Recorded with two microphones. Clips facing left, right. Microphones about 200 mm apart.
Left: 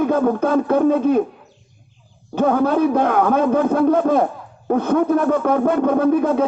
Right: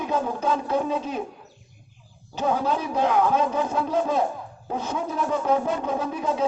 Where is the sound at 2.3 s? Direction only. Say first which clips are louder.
Left 8 dB; 55° left (ahead or behind).